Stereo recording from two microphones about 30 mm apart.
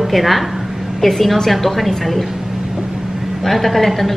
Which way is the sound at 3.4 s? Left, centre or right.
Centre.